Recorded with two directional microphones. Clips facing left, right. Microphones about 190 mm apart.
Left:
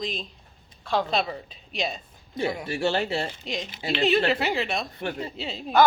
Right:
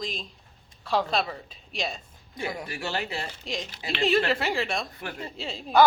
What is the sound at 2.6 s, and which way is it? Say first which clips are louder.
Speech: left 7 dB; 30° left (ahead or behind).